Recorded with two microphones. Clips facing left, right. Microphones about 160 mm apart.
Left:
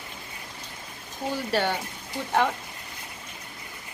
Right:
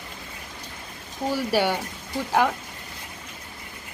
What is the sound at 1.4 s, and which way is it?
Speech, 10° right (ahead or behind).